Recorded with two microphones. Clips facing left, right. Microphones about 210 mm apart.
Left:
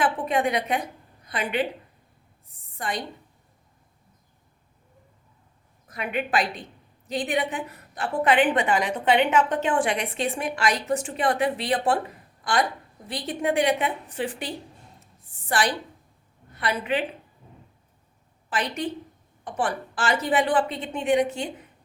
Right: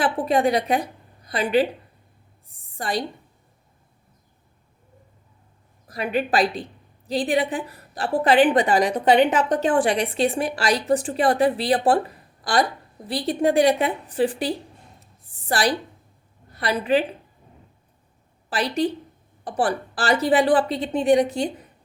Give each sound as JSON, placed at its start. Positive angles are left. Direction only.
{"t": 0.0, "sound": "a woman's voice", "side_deg": -35}
{"t": 5.9, "sound": "a woman's voice", "side_deg": -35}
{"t": 12.4, "sound": "a sound", "side_deg": -35}
{"t": 13.1, "sound": "a woman's voice", "side_deg": -35}
{"t": 18.5, "sound": "a woman's voice", "side_deg": -35}